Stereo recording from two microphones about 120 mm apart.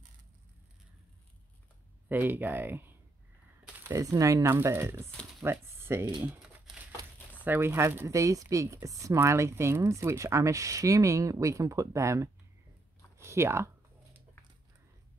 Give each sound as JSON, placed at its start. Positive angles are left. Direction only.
{"t": 2.0, "sound": "speech", "side_deg": -15}
{"t": 3.9, "sound": "speech", "side_deg": -30}
{"t": 7.4, "sound": "speech", "side_deg": -20}